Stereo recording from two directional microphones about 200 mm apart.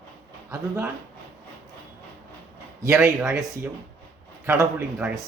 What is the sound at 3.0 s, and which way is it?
Speech, centre (ahead or behind).